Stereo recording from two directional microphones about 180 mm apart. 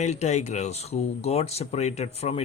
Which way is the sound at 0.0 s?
40° left (ahead or behind).